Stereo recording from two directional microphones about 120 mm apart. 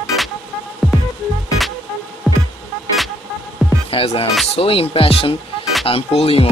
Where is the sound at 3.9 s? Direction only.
50° left (ahead or behind).